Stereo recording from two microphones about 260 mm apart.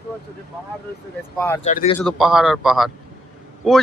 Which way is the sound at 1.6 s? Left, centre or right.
Left.